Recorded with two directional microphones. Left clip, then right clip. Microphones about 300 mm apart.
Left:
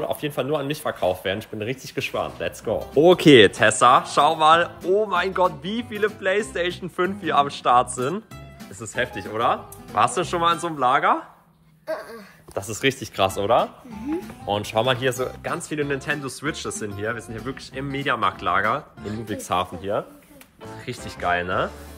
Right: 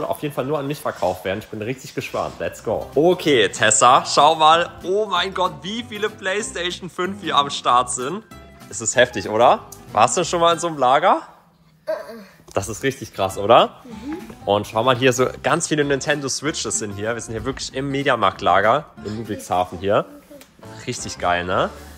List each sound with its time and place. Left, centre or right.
0.0 s speech: centre
3.2 s speech: left
3.5 s speech: centre
8.7 s speech: centre
11.8 s a sound: centre
12.8 s speech: centre
15.0 s speech: right; by 19.7 s centre
19.8 s speech: right
20.8 s speech: centre